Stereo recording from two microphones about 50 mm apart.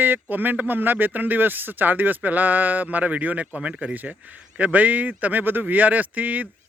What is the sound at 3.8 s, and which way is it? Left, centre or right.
Speech, right.